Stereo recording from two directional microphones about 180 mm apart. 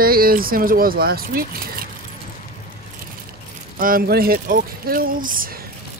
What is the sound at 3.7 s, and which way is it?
Speech, 50° right (ahead or behind).